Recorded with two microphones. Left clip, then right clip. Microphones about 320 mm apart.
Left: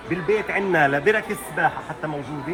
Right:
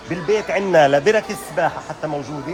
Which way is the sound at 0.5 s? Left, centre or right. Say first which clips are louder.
Right 8 dB; right.